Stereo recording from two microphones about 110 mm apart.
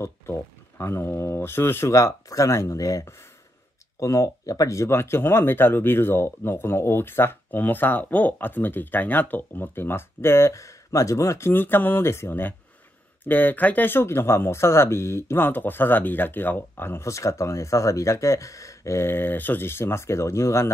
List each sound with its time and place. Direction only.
0.0 s speech: 25° left (ahead or behind)